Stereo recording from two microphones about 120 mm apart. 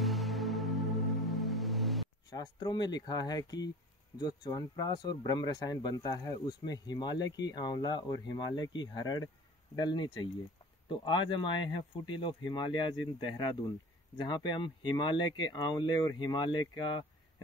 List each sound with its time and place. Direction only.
0.0 s music: centre (ahead or behind)
2.2 s speech: 35° left (ahead or behind)